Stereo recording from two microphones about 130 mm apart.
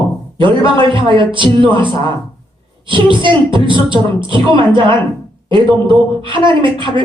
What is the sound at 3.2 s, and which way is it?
Speech, 40° right (ahead or behind).